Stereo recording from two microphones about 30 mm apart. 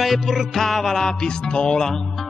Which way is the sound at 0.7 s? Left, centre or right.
Centre.